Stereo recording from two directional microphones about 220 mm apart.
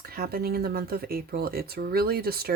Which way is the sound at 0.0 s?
45° right (ahead or behind).